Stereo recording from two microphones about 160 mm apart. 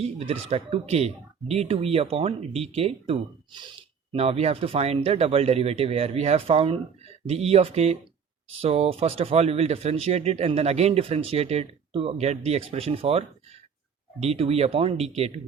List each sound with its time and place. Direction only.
0.0 s speech: 40° right (ahead or behind)